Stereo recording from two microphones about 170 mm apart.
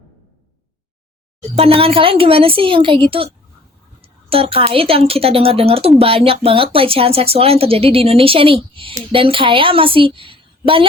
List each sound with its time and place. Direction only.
1.5 s speech: 35° right (ahead or behind)
4.3 s speech: 35° right (ahead or behind)